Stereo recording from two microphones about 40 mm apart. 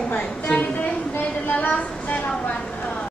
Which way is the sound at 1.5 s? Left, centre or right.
Left.